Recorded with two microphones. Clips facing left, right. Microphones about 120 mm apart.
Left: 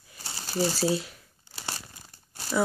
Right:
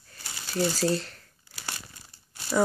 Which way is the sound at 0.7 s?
10° left (ahead or behind).